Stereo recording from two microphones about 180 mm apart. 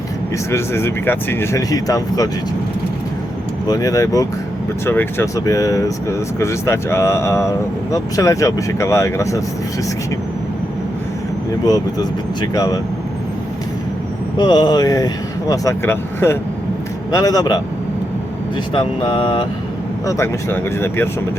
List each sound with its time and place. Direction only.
0.5 s speech: 15° left (ahead or behind)
3.7 s speech: 20° left (ahead or behind)
11.6 s speech: 20° left (ahead or behind)
14.3 s speech: 25° left (ahead or behind)
18.7 s speech: 25° left (ahead or behind)
20.1 s speech: 15° left (ahead or behind)